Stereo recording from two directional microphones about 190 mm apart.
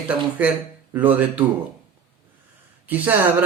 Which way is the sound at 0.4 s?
10° right (ahead or behind).